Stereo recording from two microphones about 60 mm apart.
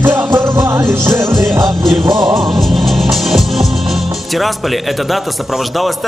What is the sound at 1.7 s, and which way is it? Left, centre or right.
Music, centre.